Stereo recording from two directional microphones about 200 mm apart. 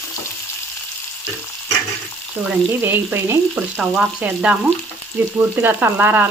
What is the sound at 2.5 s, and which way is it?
Speech, 10° right (ahead or behind).